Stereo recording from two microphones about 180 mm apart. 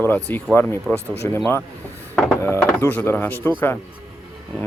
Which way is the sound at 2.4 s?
15° left (ahead or behind).